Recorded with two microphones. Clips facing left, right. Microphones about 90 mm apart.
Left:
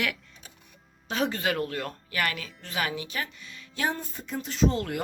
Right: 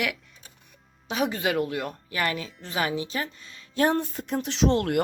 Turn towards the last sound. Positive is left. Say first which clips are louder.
# right 3 dB
turn(degrees=-65)  # may be behind; listen again after turning